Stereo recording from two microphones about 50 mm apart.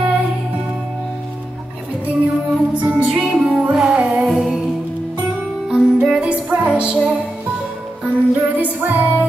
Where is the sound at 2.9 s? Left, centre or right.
Right.